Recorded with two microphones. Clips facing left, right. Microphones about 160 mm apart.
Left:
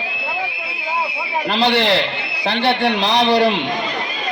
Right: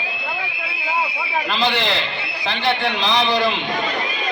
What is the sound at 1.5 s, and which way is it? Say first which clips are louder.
A man's voice: left 6 dB; 65° left (ahead or behind).